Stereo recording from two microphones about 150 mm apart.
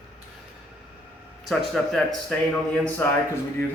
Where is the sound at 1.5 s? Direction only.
Centre (ahead or behind).